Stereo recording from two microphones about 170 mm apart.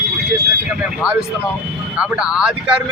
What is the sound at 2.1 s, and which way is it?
Speech, 5° right (ahead or behind).